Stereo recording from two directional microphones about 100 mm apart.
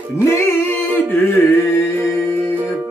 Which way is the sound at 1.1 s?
20° left (ahead or behind).